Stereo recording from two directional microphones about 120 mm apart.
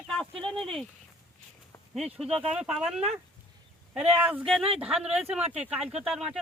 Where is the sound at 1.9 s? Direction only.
10° right (ahead or behind).